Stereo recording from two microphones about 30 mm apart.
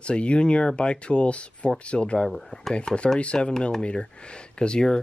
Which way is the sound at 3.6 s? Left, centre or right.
Left.